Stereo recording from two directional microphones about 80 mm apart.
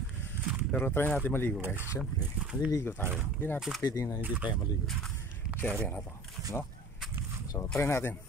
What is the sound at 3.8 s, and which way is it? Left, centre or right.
Speech, left.